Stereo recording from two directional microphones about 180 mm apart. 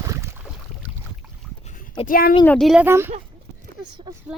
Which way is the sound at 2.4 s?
5° left (ahead or behind).